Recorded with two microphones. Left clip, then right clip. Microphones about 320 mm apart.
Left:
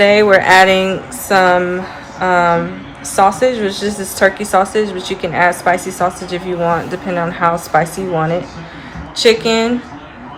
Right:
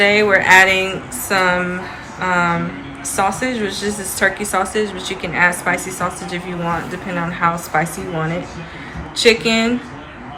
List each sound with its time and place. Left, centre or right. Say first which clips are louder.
0.0 s speech: left 4 dB; left